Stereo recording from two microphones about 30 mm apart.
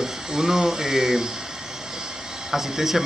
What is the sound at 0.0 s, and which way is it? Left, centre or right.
Speech, centre.